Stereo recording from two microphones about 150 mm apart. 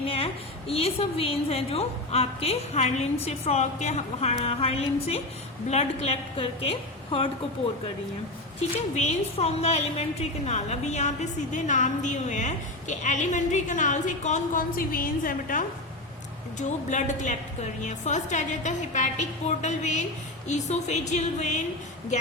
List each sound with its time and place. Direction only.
0.0 s a woman's voice: 40° left (ahead or behind)
9.0 s a woman's voice: 45° left (ahead or behind); by 15.6 s 65° left (ahead or behind)
16.6 s a woman's voice: 55° left (ahead or behind)